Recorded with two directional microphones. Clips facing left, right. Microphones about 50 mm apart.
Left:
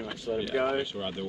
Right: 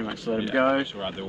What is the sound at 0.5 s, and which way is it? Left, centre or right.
Speech, right.